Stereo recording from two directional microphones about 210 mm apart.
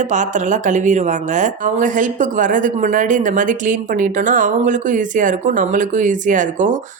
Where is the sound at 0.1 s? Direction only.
35° right (ahead or behind).